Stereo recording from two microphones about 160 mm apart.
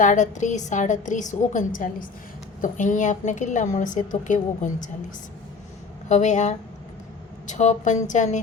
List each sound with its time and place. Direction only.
0.0 s a woman's voice: 50° left (ahead or behind)
6.1 s a woman's voice: 50° left (ahead or behind)